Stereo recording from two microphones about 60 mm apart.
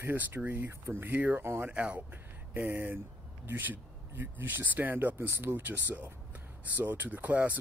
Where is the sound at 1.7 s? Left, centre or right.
Right.